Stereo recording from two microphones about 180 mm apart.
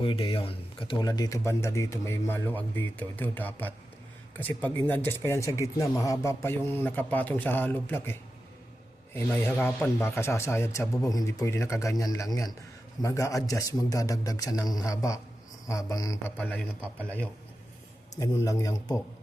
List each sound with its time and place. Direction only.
0.0 s a man's voice: 30° left (ahead or behind)
16.4 s a man's voice: 5° left (ahead or behind)
18.4 s a man's voice: 20° left (ahead or behind)